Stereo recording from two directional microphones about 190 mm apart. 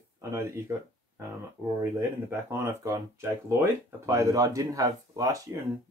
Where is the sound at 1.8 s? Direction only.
15° right (ahead or behind).